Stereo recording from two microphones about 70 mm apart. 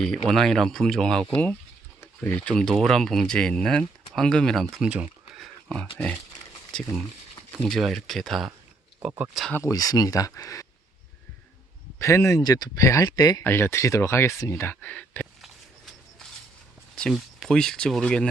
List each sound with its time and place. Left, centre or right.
0.0 s speech: centre
1.3 s speech: centre
4.8 s speech: centre
5.6 s speech: centre
7.7 s speech: centre
9.0 s speech: centre
9.7 s speech: left
11.9 s speech: left
12.4 s speech: left
13.4 s speech: left
17.2 s speech: centre